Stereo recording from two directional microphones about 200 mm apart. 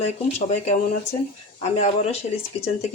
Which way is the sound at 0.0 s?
35° left (ahead or behind).